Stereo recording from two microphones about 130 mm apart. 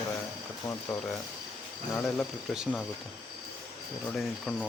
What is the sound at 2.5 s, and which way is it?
Speech, centre (ahead or behind).